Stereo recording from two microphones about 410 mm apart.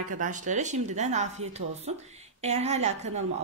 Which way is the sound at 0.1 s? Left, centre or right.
Centre.